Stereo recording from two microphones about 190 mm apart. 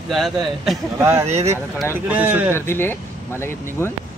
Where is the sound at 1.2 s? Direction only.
35° right (ahead or behind).